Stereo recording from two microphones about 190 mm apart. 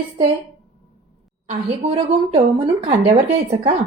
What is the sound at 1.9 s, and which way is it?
A woman's voice, 30° right (ahead or behind).